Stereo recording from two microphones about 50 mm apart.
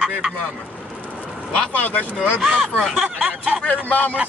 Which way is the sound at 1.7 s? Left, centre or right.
Left.